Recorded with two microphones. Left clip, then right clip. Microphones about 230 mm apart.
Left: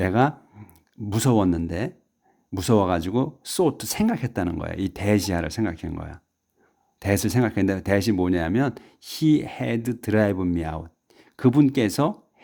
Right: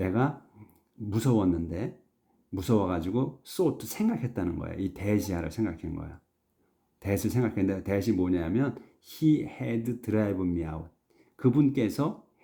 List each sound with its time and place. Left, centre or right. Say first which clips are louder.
0.0 s speech: left 8 dB; left